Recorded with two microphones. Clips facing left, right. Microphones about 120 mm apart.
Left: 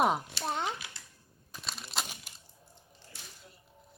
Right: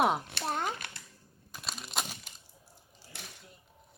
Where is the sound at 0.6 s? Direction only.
55° right (ahead or behind).